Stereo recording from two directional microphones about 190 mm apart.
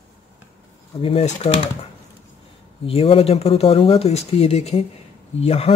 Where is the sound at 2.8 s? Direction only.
30° left (ahead or behind).